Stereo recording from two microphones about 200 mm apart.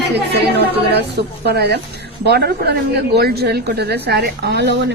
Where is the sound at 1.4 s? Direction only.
55° right (ahead or behind).